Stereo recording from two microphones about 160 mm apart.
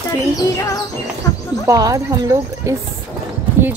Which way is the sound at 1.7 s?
20° right (ahead or behind).